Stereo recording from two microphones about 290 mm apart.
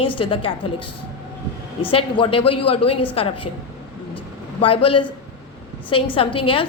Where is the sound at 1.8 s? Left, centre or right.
Centre.